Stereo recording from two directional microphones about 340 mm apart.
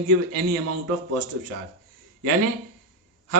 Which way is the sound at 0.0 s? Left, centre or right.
Right.